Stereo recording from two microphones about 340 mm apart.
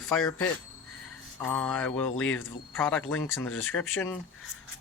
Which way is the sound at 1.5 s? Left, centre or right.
Centre.